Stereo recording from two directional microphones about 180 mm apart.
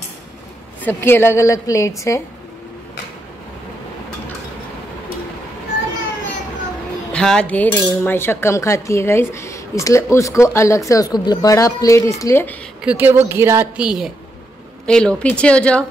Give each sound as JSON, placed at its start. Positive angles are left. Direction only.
{"t": 0.8, "sound": "cutlery", "side_deg": 10}
{"t": 7.1, "sound": "cutlery", "side_deg": 5}
{"t": 12.8, "sound": "a woman's voice", "side_deg": -10}
{"t": 14.9, "sound": "cutlery", "side_deg": 5}